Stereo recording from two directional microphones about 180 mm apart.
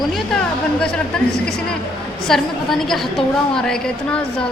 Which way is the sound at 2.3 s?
Centre (ahead or behind).